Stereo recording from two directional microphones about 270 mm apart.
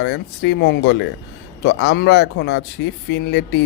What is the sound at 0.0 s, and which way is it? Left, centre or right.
Speech, left.